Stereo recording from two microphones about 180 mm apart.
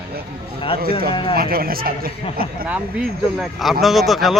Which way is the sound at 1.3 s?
55° right (ahead or behind).